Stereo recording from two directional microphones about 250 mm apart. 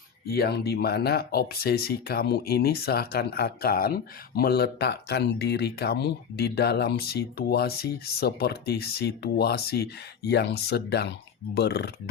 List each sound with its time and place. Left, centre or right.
0.3 s speech: left